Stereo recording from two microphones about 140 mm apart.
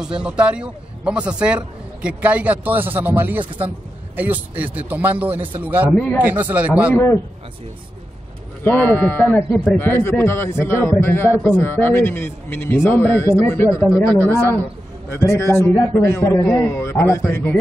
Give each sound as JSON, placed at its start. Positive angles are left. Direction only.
{"t": 0.0, "sound": "a man's voice", "side_deg": -5}
{"t": 5.9, "sound": "a man's voice", "side_deg": 10}
{"t": 6.2, "sound": "a man's voice", "side_deg": -10}
{"t": 8.6, "sound": "a man's voice", "side_deg": 15}